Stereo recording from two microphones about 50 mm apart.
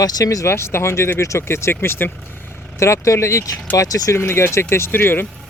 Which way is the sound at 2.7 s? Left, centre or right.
Left.